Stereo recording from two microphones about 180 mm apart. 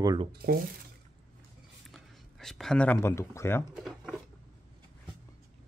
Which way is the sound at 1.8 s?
Centre (ahead or behind).